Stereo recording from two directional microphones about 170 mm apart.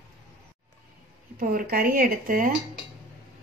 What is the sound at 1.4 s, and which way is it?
A woman's voice, 60° right (ahead or behind).